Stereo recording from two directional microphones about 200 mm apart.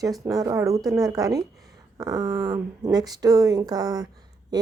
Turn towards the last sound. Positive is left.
turn(degrees=-20)  # may be behind; listen again after turning